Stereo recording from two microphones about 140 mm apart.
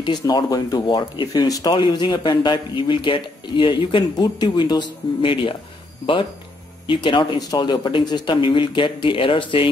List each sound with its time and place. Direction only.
0.0 s speech: 35° left (ahead or behind)
6.9 s speech: 35° left (ahead or behind)